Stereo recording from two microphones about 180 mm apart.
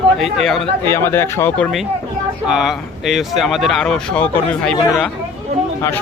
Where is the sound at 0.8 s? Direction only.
15° left (ahead or behind).